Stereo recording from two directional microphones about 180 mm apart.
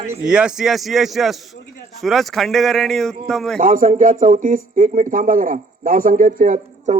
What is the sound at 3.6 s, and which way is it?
Speech, 50° right (ahead or behind).